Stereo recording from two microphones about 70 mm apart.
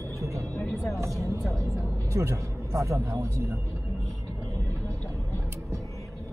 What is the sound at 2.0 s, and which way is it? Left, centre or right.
Speech, right.